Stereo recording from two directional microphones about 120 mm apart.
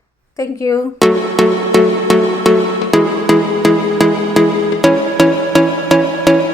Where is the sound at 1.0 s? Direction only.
Centre (ahead or behind).